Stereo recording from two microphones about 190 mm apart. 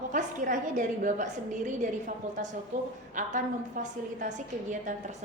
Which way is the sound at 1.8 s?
40° right (ahead or behind).